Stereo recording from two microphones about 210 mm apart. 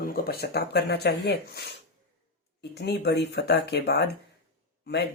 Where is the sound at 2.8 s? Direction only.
50° left (ahead or behind).